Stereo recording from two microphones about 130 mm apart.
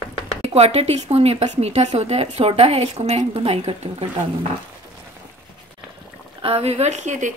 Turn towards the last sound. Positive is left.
turn(degrees=-70)  # may be behind; listen again after turning